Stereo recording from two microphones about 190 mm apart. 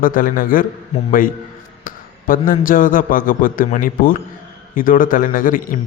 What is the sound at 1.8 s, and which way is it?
A man's voice, 45° left (ahead or behind).